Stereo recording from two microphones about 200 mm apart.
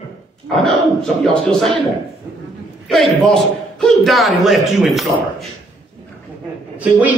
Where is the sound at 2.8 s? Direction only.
Centre (ahead or behind).